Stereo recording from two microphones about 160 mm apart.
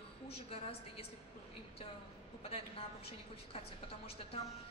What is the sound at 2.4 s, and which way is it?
A woman's voice, 40° left (ahead or behind).